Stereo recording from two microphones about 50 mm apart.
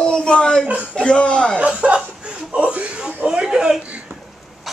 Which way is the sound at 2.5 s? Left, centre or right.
Right.